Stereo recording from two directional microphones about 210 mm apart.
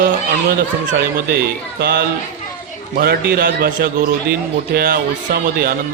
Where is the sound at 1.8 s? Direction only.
50° right (ahead or behind).